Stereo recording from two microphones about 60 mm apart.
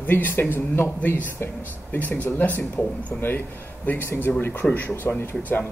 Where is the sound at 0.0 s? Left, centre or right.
Left.